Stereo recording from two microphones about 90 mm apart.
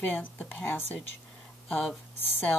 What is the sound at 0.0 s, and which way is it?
Speech, 20° left (ahead or behind).